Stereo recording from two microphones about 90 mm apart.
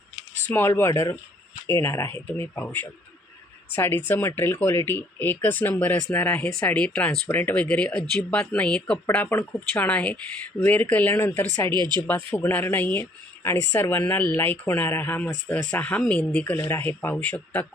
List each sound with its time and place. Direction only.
0.5 s speech: 30° left (ahead or behind)
3.7 s speech: 25° left (ahead or behind)
11.7 s speech: 55° right (ahead or behind)
12.3 s speech: 25° left (ahead or behind)